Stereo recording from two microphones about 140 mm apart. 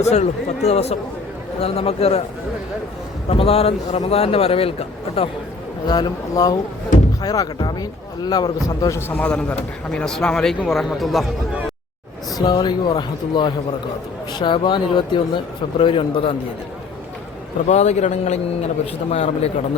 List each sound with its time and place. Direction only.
0.0 s a man's voice: 50° left (ahead or behind)
3.2 s a man's voice: 45° left (ahead or behind)
5.9 s a man's voice: 30° left (ahead or behind); by 11.3 s centre (ahead or behind)
12.4 s speech: 30° left (ahead or behind)
17.7 s a man's voice: 50° left (ahead or behind)